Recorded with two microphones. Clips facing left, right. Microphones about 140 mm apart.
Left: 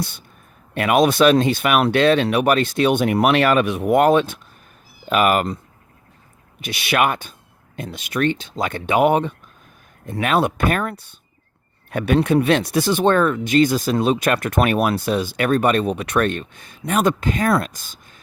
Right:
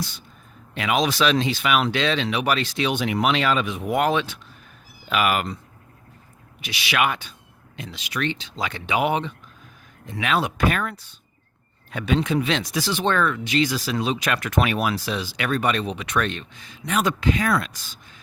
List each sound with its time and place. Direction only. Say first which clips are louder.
0.7 s speech: left 6 dB; 55° left (ahead or behind)
6.6 s speech: left 4 dB; 50° left (ahead or behind)